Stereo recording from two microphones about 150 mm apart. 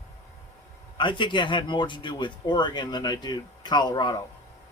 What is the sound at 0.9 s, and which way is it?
Speech, 30° left (ahead or behind).